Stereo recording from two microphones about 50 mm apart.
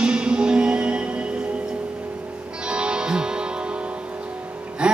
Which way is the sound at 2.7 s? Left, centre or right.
Centre.